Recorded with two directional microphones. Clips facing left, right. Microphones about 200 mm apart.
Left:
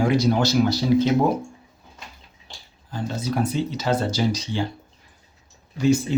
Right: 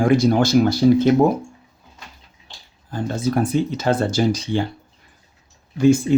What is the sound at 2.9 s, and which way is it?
Speech, 50° right (ahead or behind).